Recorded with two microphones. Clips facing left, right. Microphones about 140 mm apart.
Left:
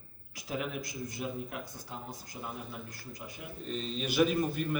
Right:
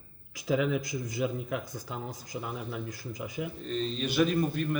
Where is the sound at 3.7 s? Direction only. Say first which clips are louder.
Right 2 dB; 5° left (ahead or behind).